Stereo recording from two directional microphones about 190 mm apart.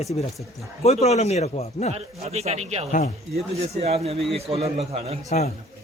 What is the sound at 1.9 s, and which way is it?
A man's voice, 35° right (ahead or behind).